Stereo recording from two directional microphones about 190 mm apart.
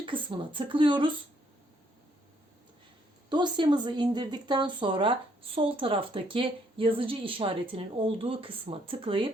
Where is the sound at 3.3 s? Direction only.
25° right (ahead or behind).